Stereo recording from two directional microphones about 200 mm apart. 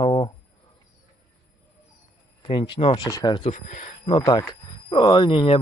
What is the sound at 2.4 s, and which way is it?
Speech, 25° left (ahead or behind).